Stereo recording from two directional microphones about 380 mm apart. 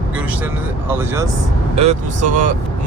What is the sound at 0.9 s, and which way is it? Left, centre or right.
Speech, centre.